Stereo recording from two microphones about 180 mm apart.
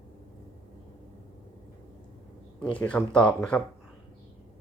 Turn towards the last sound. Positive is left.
turn(degrees=5)  # may be behind; listen again after turning